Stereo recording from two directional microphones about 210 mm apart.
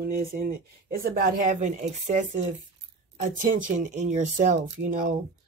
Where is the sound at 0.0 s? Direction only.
45° right (ahead or behind).